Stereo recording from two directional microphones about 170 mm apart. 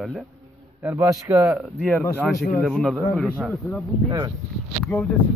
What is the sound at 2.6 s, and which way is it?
Speech, centre (ahead or behind).